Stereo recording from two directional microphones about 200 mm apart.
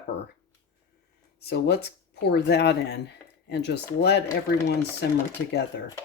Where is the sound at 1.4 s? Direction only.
55° left (ahead or behind).